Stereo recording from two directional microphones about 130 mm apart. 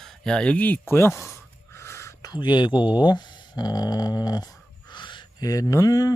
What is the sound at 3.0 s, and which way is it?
Speech, 35° left (ahead or behind).